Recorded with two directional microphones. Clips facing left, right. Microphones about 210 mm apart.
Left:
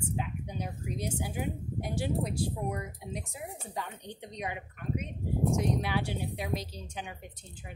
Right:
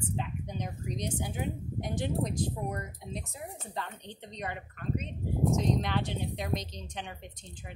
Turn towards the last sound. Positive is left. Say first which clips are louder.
# even
turn(degrees=5)  # may be behind; listen again after turning